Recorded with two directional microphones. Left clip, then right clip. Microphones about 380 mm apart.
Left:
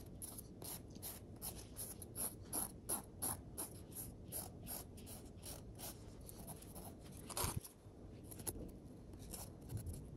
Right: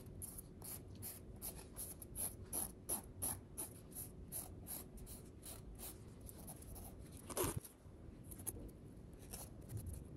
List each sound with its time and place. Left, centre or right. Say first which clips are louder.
2.2 s mechanisms: left 2 dB; centre
7.2 s biting: right 2 dB; right